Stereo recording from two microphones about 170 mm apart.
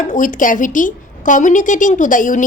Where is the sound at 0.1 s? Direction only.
50° left (ahead or behind).